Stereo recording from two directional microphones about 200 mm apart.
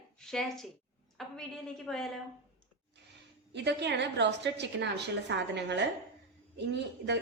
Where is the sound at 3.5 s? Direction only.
60° right (ahead or behind).